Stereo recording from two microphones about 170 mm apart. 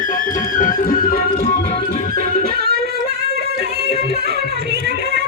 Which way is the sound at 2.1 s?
60° right (ahead or behind).